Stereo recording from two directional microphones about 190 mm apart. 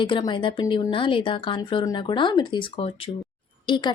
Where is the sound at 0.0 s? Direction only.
25° left (ahead or behind).